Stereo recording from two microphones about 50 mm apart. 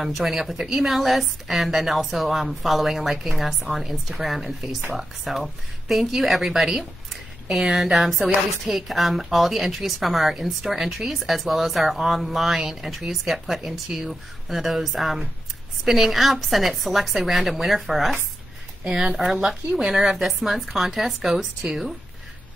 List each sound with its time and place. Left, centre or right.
0.0 s a woman's voice: centre
18.9 s speech: centre
20.0 s a woman's voice: centre